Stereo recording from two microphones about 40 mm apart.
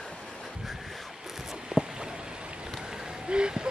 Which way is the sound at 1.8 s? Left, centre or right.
Right.